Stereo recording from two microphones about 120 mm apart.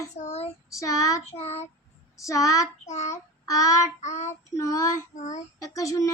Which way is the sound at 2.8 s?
70° left (ahead or behind).